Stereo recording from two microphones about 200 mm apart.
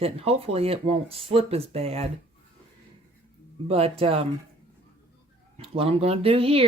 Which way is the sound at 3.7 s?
30° right (ahead or behind).